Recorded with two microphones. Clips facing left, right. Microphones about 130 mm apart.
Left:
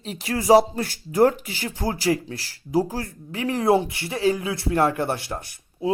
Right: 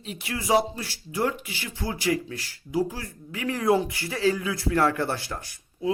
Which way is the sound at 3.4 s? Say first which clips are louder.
Left 3 dB; 25° left (ahead or behind).